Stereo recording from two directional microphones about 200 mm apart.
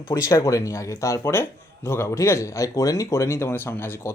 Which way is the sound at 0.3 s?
15° left (ahead or behind).